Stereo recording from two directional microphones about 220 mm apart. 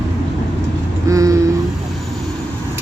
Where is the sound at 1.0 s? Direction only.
15° right (ahead or behind).